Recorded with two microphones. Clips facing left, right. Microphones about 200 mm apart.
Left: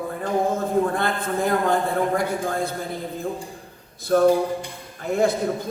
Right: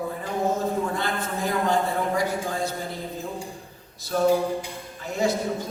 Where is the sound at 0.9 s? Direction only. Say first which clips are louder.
Left 4 dB; 55° left (ahead or behind).